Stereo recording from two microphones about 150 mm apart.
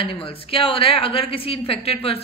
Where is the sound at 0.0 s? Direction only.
35° left (ahead or behind).